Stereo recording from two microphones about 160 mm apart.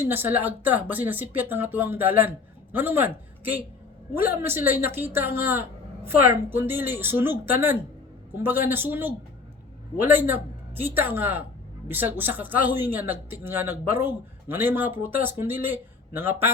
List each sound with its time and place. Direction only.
0.0 s speech: 15° right (ahead or behind)